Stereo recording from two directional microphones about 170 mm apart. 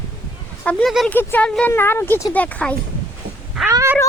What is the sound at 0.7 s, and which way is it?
Speech, 5° left (ahead or behind).